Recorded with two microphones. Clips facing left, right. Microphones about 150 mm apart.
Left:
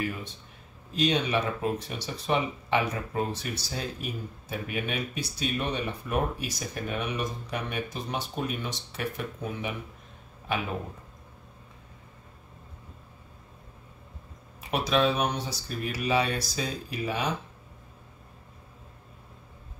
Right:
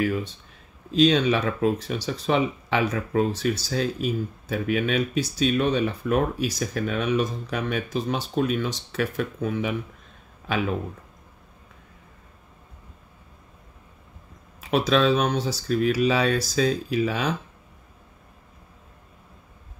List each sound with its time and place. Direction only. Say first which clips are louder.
0.9 s speech: right 7 dB; 90° right
14.7 s speech: right 5 dB; 90° right